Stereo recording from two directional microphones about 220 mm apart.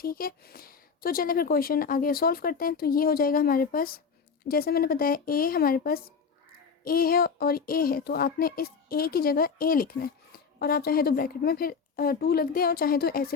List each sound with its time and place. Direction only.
0.0 s speech: 40° left (ahead or behind)